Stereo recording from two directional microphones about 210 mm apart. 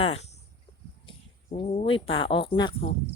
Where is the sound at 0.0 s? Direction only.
30° left (ahead or behind).